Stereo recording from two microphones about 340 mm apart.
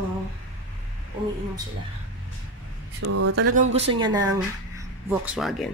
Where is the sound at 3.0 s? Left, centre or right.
Right.